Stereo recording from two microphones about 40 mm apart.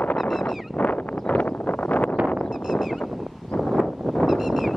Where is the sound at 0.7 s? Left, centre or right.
Left.